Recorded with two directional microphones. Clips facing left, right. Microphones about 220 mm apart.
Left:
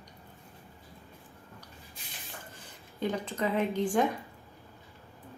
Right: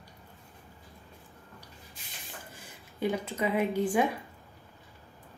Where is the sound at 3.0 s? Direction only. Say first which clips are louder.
Right 1 dB; 10° right (ahead or behind).